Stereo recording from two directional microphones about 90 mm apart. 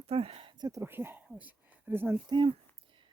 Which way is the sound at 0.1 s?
90° right.